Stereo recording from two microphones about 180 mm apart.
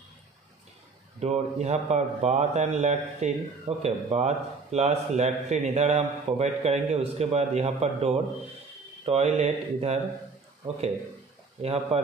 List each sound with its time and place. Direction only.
1.2 s a man's voice: 40° right (ahead or behind)
11.6 s a man's voice: 35° right (ahead or behind)